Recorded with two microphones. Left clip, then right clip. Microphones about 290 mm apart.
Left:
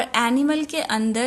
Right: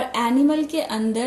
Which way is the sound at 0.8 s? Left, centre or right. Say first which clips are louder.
Left 1 dB; left.